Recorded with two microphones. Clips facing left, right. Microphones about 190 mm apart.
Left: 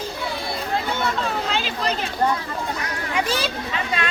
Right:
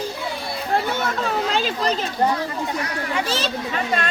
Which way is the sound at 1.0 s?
45° right (ahead or behind).